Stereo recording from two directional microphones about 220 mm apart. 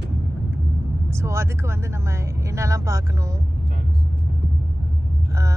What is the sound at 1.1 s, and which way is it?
Speech, 10° right (ahead or behind).